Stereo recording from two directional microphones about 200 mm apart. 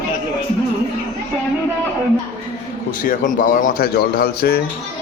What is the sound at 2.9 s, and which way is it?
Speech, 45° left (ahead or behind).